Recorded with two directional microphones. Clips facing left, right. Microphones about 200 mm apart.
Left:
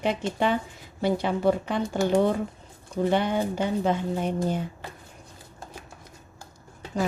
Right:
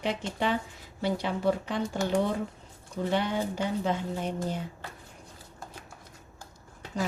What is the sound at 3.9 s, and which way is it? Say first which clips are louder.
Speech: left 5 dB; 55° left (ahead or behind).